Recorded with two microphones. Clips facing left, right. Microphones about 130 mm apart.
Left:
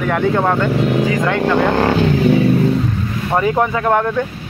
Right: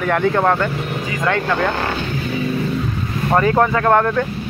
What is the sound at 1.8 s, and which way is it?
Speech, 90° left.